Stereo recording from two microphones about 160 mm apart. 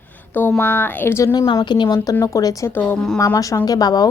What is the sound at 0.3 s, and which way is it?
A woman's voice, 10° left (ahead or behind).